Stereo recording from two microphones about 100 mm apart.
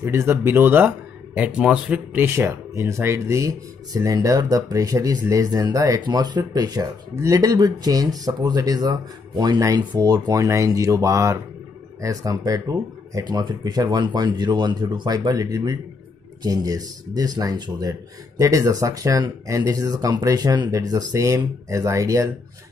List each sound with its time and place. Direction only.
0.0 s speech: 25° right (ahead or behind)